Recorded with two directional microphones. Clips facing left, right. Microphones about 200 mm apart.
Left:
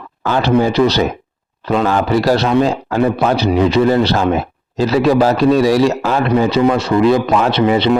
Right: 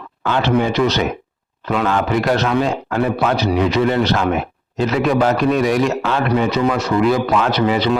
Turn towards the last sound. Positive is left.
turn(degrees=25)  # may be behind; listen again after turning